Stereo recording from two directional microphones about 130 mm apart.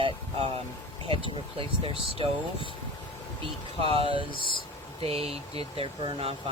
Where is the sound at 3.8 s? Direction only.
45° right (ahead or behind).